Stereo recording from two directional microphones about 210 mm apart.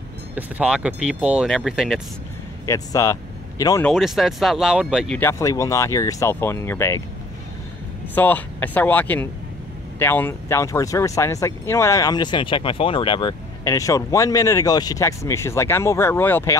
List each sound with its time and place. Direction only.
0.4 s speech: 5° right (ahead or behind)
2.6 s speech: 15° left (ahead or behind)
3.8 s speech: centre (ahead or behind)
8.1 s speech: 10° left (ahead or behind)